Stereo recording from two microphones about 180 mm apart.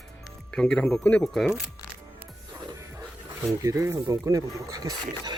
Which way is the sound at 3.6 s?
15° right (ahead or behind).